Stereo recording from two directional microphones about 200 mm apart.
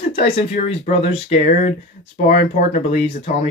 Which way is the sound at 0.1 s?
30° left (ahead or behind).